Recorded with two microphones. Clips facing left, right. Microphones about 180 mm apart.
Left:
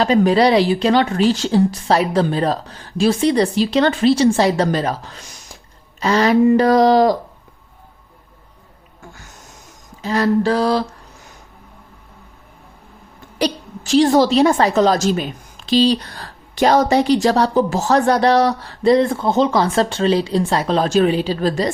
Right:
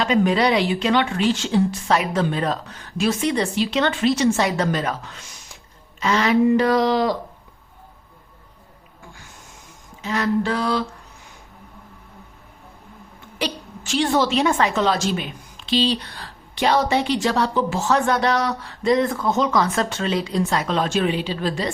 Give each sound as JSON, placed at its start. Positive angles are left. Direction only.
{"t": 0.0, "sound": "a woman's voice", "side_deg": 35}
{"t": 10.0, "sound": "a woman's voice", "side_deg": 35}
{"t": 13.4, "sound": "a woman's voice", "side_deg": 35}